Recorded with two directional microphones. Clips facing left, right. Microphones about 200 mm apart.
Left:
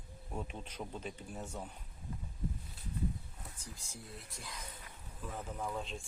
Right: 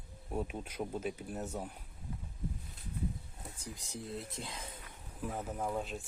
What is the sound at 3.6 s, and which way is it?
Speech, 20° right (ahead or behind).